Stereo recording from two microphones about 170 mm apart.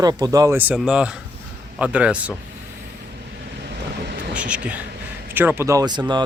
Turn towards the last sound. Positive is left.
turn(degrees=-25)  # may be behind; listen again after turning